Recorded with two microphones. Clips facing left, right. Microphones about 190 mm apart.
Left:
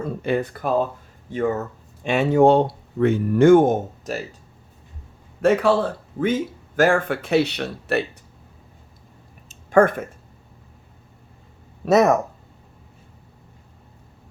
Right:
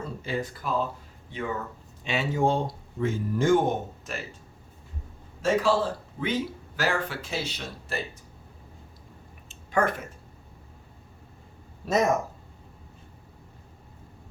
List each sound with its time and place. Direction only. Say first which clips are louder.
0.0 s speech: left 8 dB; 60° left (ahead or behind)
1.3 s speech: left 9 dB; 45° left (ahead or behind)
2.0 s speech: left 10 dB; 60° left (ahead or behind); by 4.2 s 45° left (ahead or behind)
5.4 s speech: left 6 dB; 60° left (ahead or behind)
9.5 s a sound: left 9 dB; 50° left (ahead or behind)
11.9 s speech: left 8 dB; 70° left (ahead or behind)